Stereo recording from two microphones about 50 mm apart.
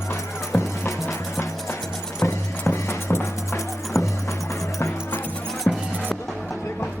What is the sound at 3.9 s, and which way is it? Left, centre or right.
Music, left.